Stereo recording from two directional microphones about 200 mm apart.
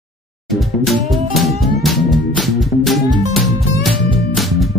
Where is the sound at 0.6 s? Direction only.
Centre (ahead or behind).